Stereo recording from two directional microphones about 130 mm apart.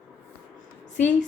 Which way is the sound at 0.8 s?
70° left (ahead or behind).